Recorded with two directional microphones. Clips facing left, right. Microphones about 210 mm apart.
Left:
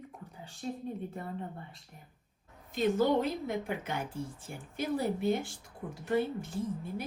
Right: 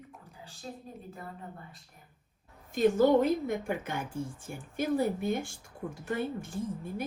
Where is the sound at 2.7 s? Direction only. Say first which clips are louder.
Right 4 dB; 50° right (ahead or behind).